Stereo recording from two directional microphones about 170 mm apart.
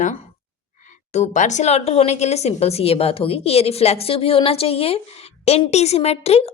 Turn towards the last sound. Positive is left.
turn(degrees=35)  # may be behind; listen again after turning